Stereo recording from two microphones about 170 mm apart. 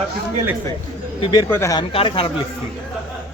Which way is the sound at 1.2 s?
25° left (ahead or behind).